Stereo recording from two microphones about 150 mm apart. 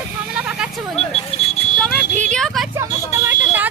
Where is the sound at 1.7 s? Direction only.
5° left (ahead or behind).